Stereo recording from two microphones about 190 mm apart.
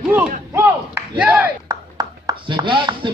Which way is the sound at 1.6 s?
20° right (ahead or behind).